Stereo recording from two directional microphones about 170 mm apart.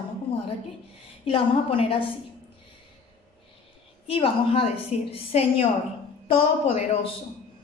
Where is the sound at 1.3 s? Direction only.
30° left (ahead or behind).